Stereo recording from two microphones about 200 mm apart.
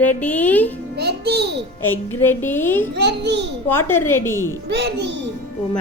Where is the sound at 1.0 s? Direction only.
55° right (ahead or behind).